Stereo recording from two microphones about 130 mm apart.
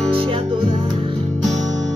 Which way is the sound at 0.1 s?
45° right (ahead or behind).